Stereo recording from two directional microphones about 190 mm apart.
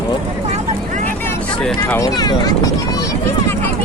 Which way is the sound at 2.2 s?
20° left (ahead or behind).